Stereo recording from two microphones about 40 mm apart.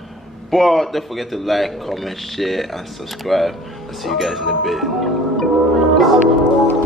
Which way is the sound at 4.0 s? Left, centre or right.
Centre.